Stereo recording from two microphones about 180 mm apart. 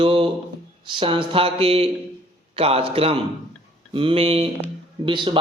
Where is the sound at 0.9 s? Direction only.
30° right (ahead or behind).